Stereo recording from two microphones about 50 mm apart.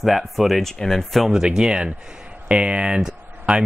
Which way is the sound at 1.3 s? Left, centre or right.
Centre.